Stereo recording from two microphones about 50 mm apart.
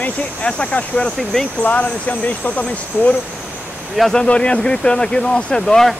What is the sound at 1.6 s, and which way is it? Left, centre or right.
Speech, left.